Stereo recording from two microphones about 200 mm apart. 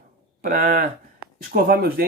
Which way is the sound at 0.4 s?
45° right (ahead or behind).